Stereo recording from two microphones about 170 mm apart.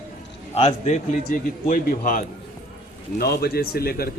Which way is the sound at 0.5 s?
40° left (ahead or behind).